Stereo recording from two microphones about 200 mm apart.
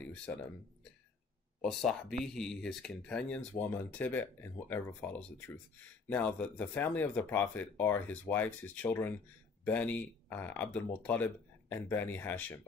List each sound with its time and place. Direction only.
0.0 s speech: 5° left (ahead or behind)
1.6 s speech: 5° left (ahead or behind)